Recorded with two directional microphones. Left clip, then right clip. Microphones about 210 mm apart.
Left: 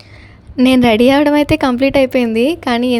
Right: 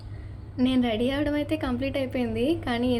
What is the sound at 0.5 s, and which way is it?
A woman's voice, 50° left (ahead or behind).